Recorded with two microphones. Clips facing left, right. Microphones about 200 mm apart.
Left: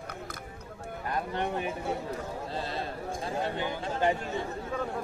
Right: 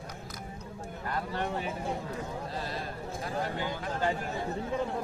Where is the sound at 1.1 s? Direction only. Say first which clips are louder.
Left 2 dB; 20° left (ahead or behind).